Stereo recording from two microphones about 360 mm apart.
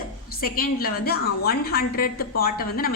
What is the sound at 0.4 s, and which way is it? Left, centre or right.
A woman's voice, left.